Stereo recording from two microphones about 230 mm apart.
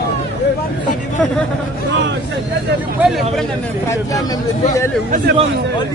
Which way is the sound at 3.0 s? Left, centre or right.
Centre.